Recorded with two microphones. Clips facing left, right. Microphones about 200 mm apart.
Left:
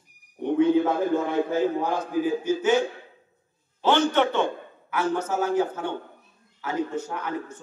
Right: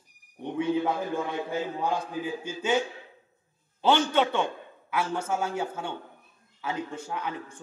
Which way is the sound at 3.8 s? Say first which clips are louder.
Left 2 dB; 15° right (ahead or behind).